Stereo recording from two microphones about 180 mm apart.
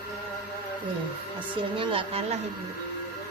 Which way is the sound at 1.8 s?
30° right (ahead or behind).